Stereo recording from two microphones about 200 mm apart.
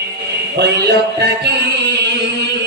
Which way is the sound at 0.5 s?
55° right (ahead or behind).